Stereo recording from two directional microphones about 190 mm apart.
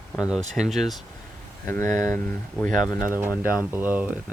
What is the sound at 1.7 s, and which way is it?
Speech, 15° left (ahead or behind).